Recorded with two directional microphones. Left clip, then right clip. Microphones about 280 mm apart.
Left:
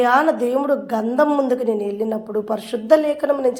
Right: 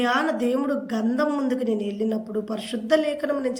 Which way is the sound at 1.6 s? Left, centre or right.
Centre.